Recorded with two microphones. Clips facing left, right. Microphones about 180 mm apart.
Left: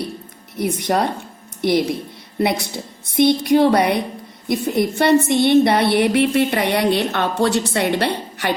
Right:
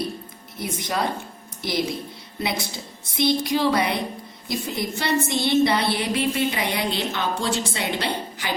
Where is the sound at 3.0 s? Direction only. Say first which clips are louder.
Left 6 dB; 60° left (ahead or behind).